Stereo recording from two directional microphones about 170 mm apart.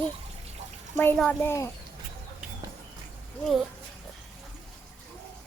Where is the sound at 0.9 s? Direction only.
10° left (ahead or behind).